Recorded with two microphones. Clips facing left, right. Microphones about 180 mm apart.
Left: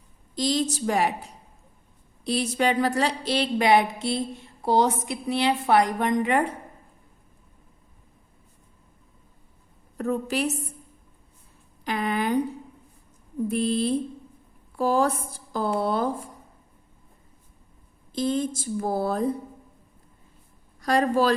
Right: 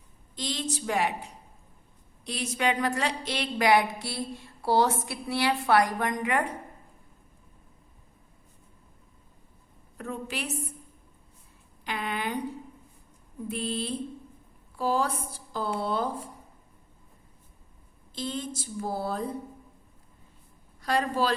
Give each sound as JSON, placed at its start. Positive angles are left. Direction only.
{"t": 0.3, "sound": "a woman's voice", "side_deg": 40}
{"t": 2.2, "sound": "speech", "side_deg": 35}
{"t": 10.0, "sound": "a woman's voice", "side_deg": 40}
{"t": 11.9, "sound": "speech", "side_deg": 45}
{"t": 13.5, "sound": "speech", "side_deg": 45}
{"t": 18.1, "sound": "speech", "side_deg": 45}
{"t": 20.8, "sound": "speech", "side_deg": 45}